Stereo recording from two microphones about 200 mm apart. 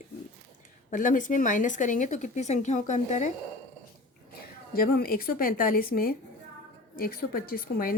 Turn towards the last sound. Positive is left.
turn(degrees=45)  # may be behind; listen again after turning